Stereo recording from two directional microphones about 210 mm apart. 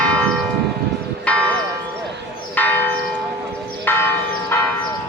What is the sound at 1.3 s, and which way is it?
Church bell, 5° left (ahead or behind).